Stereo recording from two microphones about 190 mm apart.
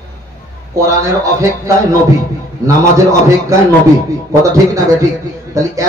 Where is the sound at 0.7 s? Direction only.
15° right (ahead or behind).